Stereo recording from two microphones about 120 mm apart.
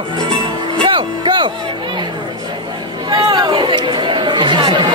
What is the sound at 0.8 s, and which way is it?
Music, 40° right (ahead or behind).